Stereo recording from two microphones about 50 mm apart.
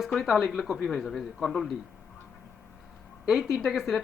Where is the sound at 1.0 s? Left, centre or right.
Centre.